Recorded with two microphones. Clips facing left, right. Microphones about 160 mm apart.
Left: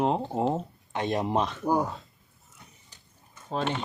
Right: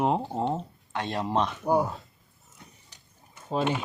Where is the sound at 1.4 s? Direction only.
5° right (ahead or behind).